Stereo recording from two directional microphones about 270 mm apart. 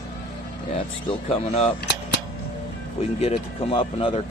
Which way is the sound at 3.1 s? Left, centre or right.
Left.